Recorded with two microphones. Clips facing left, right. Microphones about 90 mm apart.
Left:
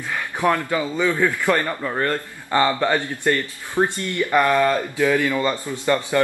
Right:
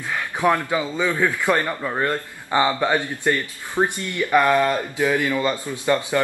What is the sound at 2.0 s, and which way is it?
Speech, 15° right (ahead or behind).